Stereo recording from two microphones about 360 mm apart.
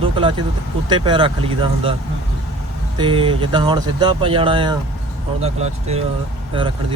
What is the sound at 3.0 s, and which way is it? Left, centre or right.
Speech, centre.